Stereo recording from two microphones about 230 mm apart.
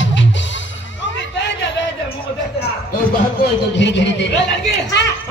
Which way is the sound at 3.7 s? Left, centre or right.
Left.